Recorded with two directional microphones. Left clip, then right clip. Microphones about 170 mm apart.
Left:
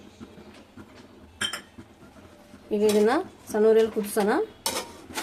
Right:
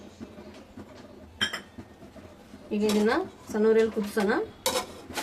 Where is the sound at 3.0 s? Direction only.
75° left (ahead or behind).